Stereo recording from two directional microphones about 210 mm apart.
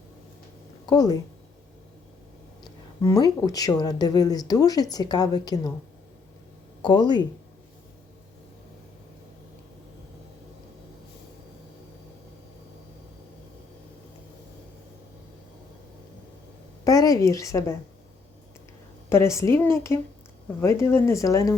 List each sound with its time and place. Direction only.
0.9 s speech: 20° left (ahead or behind)
2.6 s speech: 15° left (ahead or behind)
6.8 s speech: 20° left (ahead or behind)
16.8 s a woman's voice: 15° left (ahead or behind)
19.0 s a woman's voice: 10° left (ahead or behind)